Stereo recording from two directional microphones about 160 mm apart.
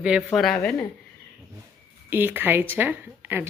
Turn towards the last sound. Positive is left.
turn(degrees=-15)  # may be behind; listen again after turning